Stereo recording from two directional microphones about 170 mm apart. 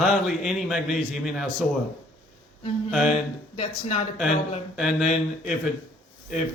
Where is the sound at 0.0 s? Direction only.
Centre (ahead or behind).